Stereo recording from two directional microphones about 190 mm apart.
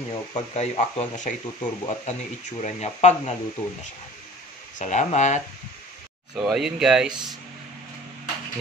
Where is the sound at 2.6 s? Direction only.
35° left (ahead or behind).